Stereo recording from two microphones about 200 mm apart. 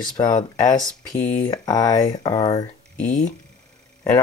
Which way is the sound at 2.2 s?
20° left (ahead or behind).